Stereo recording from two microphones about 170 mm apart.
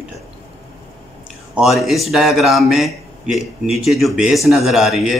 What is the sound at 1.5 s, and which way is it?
A man's voice, centre (ahead or behind).